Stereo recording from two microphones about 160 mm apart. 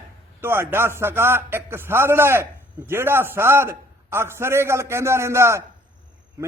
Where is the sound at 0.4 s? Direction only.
15° right (ahead or behind).